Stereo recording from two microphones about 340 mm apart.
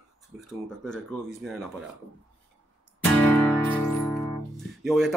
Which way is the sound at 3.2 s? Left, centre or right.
Centre.